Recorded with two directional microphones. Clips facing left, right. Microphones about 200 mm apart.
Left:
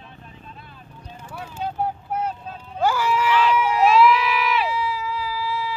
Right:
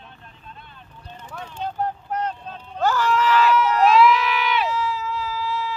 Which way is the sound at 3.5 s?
10° left (ahead or behind).